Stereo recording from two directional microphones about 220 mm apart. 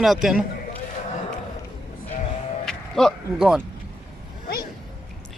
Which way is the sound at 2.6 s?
Centre (ahead or behind).